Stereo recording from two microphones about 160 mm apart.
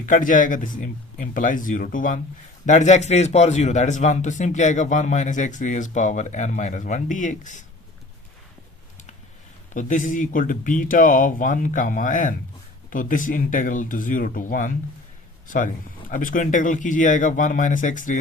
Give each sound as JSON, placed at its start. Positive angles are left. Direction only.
{"t": 0.0, "sound": "speech", "side_deg": 55}
{"t": 9.7, "sound": "speech", "side_deg": 55}